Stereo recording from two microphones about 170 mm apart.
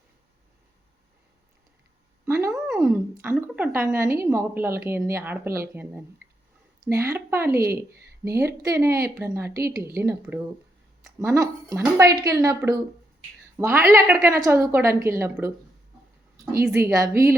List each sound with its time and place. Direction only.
2.2 s a sound: 15° right (ahead or behind)
2.8 s a woman's voice: 15° right (ahead or behind)
9.5 s a woman's voice: 65° right (ahead or behind)
9.7 s a woman's voice: 15° right (ahead or behind)
16.7 s a woman's voice: 20° right (ahead or behind)